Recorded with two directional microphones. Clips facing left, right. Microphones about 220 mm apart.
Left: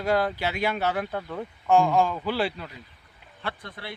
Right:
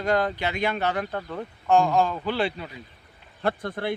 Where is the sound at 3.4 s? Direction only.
50° right (ahead or behind).